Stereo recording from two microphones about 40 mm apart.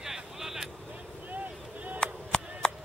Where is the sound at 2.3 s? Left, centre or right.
Left.